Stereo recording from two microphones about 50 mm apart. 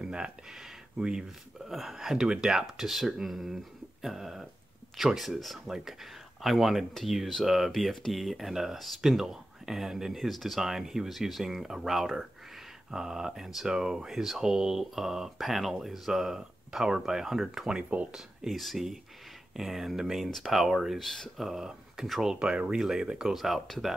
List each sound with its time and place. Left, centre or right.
0.0 s speech: centre
21.0 s speech: centre
21.5 s speech: centre
23.3 s speech: centre